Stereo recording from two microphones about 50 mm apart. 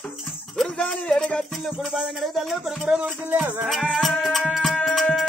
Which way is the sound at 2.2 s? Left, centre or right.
Centre.